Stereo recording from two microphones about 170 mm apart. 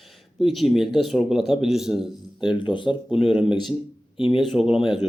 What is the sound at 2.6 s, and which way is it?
Speech, 30° left (ahead or behind).